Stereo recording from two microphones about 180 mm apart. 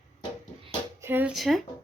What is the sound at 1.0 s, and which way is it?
Speech, 10° right (ahead or behind).